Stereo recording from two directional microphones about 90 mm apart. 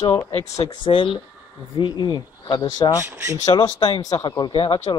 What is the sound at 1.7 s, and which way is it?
Speech, 55° left (ahead or behind).